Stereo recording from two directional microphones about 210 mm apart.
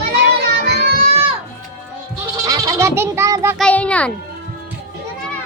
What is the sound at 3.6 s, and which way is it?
Speech, 5° left (ahead or behind).